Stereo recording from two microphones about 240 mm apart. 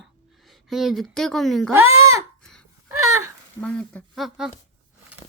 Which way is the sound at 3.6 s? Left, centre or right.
Centre.